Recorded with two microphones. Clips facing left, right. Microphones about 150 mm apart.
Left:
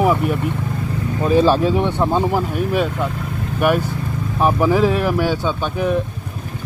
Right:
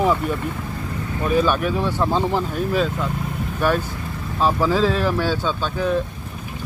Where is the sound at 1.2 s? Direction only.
30° left (ahead or behind); by 2.9 s 15° left (ahead or behind).